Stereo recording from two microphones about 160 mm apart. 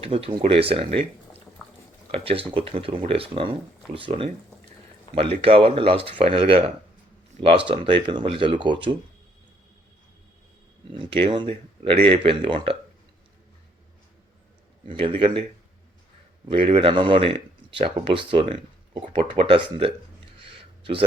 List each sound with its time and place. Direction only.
0.0 s speech: 35° right (ahead or behind)
2.1 s speech: 35° right (ahead or behind)
5.4 s speech: 35° right (ahead or behind)
10.9 s speech: 30° right (ahead or behind)
14.8 s speech: 35° right (ahead or behind)
16.5 s speech: 35° right (ahead or behind)
20.5 s a sound: 35° right (ahead or behind)